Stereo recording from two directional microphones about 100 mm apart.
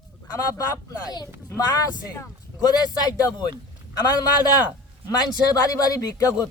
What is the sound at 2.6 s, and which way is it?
Speech, 35° left (ahead or behind).